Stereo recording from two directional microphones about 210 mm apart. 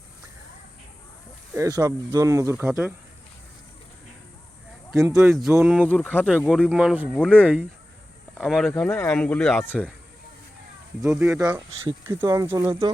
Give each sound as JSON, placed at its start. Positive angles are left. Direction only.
{"t": 1.5, "sound": "speech", "side_deg": -15}
{"t": 5.3, "sound": "speech", "side_deg": 0}
{"t": 5.9, "sound": "speech", "side_deg": 10}
{"t": 6.2, "sound": "speech", "side_deg": -5}
{"t": 7.2, "sound": "speech", "side_deg": 5}
{"t": 11.0, "sound": "speech", "side_deg": -15}